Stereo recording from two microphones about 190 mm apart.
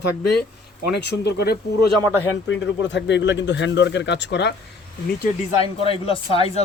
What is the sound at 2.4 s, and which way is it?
Speech, 70° left (ahead or behind).